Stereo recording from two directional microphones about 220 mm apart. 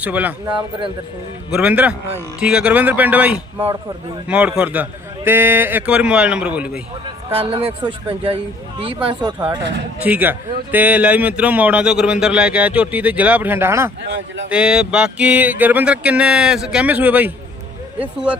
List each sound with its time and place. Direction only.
0.0 s a man's voice: 5° right (ahead or behind)
1.5 s a man's voice: 5° right (ahead or behind)
4.3 s a sound: 5° right (ahead or behind)
7.3 s speech: 25° right (ahead or behind)
10.0 s a man's voice: 10° right (ahead or behind)
14.1 s speech: 60° right (ahead or behind)
14.5 s a sound: 5° right (ahead or behind)